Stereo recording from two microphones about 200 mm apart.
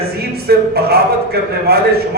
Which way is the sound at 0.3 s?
50° right (ahead or behind).